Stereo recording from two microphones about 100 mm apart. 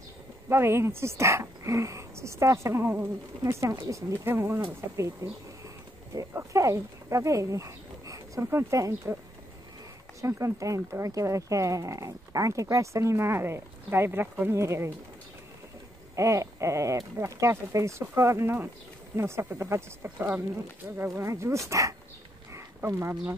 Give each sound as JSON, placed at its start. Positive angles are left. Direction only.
{"t": 0.5, "sound": "speech", "side_deg": -25}
{"t": 10.2, "sound": "speech", "side_deg": -30}
{"t": 16.2, "sound": "speech", "side_deg": -30}
{"t": 22.5, "sound": "a sound", "side_deg": -30}